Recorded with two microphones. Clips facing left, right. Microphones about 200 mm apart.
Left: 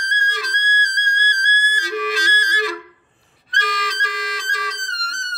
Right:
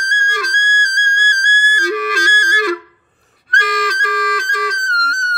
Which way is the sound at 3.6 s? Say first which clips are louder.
Right 6 dB; 50° right (ahead or behind).